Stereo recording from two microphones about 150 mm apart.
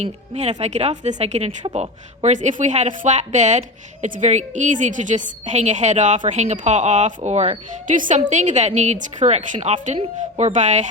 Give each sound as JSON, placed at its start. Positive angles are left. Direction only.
{"t": 0.0, "sound": "a woman's voice", "side_deg": -45}
{"t": 7.9, "sound": "a woman's voice", "side_deg": -60}